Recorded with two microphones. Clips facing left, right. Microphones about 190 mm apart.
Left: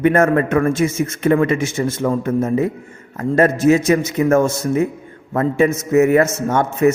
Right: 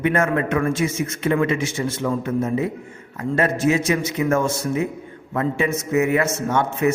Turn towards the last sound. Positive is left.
turn(degrees=45)  # may be behind; listen again after turning